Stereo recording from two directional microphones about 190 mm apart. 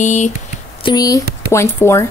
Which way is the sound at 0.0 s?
40° left (ahead or behind).